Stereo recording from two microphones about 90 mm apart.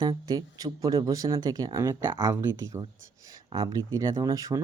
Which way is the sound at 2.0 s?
30° right (ahead or behind).